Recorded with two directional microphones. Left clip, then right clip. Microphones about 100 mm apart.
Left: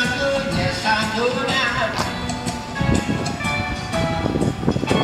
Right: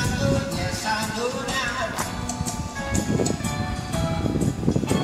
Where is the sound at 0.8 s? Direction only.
20° right (ahead or behind).